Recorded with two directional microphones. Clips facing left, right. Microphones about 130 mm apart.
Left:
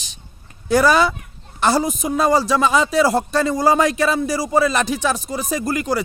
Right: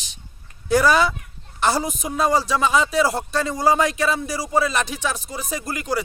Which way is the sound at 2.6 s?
35° left (ahead or behind).